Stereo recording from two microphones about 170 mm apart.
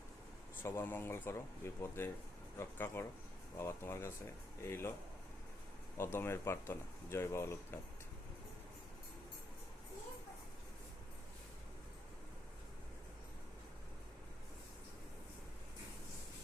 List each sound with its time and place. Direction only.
0.6 s speech: 15° left (ahead or behind)
6.0 s speech: 15° left (ahead or behind)